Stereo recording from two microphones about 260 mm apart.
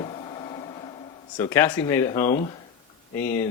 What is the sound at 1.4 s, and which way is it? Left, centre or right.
Speech, centre.